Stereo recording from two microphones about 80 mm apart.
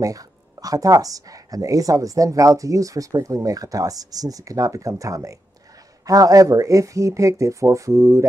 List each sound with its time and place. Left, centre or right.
0.0 s speech: right